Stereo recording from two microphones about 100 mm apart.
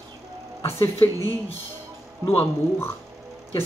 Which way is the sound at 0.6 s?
30° left (ahead or behind).